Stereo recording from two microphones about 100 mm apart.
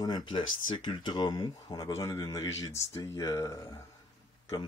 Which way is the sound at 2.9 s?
30° left (ahead or behind).